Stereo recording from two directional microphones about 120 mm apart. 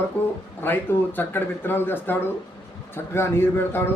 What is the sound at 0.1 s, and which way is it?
A man's voice, 15° left (ahead or behind).